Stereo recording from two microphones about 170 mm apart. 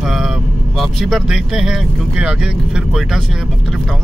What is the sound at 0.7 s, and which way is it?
Speech, centre (ahead or behind).